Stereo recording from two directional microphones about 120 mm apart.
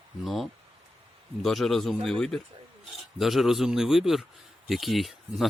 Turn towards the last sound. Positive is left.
turn(degrees=0)  # may be behind; listen again after turning